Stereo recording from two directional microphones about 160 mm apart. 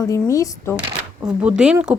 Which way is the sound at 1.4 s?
5° right (ahead or behind).